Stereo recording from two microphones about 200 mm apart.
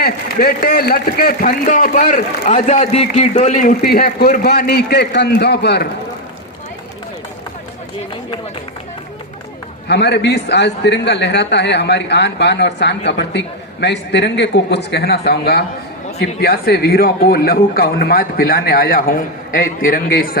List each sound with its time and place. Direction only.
0.0 s a man's voice: 50° left (ahead or behind)
9.9 s a man's voice: 60° left (ahead or behind)